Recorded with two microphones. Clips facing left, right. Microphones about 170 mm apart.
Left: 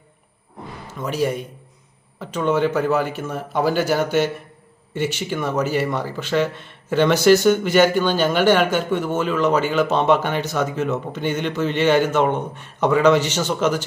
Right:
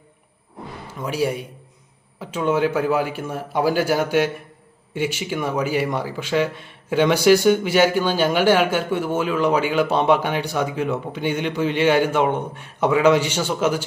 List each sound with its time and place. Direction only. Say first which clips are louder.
0.9 s speech: left 1 dB; 10° right (ahead or behind)